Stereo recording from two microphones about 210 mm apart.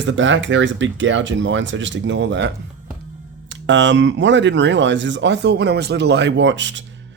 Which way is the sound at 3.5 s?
60° right (ahead or behind).